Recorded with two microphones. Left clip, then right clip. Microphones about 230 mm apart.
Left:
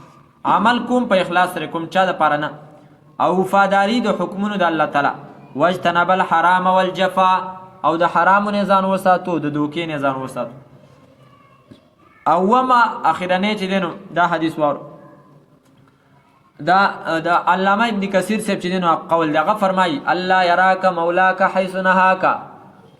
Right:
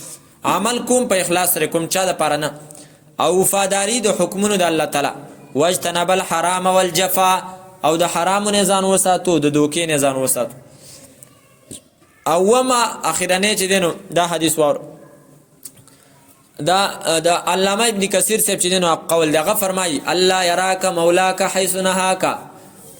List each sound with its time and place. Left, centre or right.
0.4 s a man's voice: right
3.5 s a man's voice: right
8.0 s a man's voice: right
9.6 s a man's voice: right
12.2 s a man's voice: right
16.6 s a man's voice: right